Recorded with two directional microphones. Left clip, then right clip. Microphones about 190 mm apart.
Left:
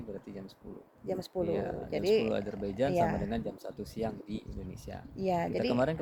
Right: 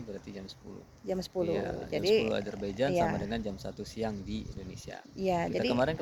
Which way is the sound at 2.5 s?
15° left (ahead or behind).